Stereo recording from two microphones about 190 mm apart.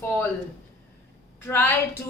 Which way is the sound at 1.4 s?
10° left (ahead or behind).